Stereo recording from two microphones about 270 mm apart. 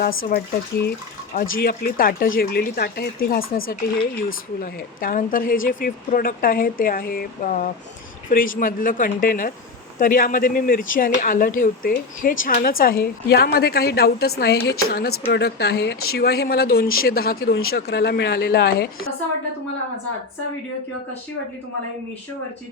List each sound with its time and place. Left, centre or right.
0.3 s speech: left
4.6 s speech: left